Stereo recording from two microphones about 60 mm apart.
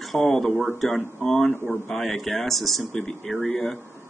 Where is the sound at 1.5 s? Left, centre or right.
Left.